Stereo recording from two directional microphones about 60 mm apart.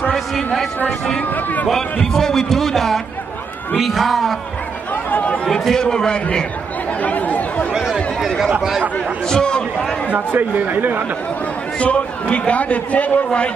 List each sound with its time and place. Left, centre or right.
0.1 s a sound: centre
0.8 s a man's voice: centre
1.3 s a man's voice: left
1.7 s speech: centre
5.1 s a man's voice: left
5.4 s a man's voice: centre
7.0 s chatter: left
7.7 s a sound: centre
8.5 s speech: centre
9.3 s a man's voice: centre
10.1 s speech: right
11.8 s a man's voice: left